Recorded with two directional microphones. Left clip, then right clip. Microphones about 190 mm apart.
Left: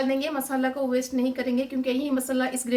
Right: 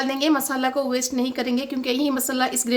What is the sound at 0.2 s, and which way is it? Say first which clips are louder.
A woman's voice: right 6 dB; 65° right (ahead or behind).